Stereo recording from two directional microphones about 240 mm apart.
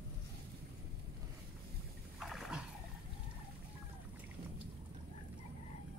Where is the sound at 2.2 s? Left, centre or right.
Centre.